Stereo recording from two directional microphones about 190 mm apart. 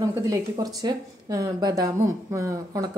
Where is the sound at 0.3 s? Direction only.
20° right (ahead or behind).